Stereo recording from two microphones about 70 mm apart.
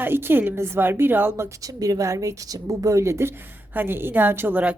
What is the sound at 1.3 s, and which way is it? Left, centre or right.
A woman's voice, right.